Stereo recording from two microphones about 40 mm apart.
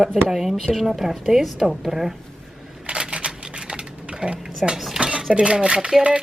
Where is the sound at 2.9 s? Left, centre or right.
Right.